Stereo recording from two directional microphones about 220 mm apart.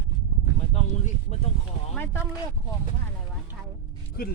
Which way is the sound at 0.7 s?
30° left (ahead or behind).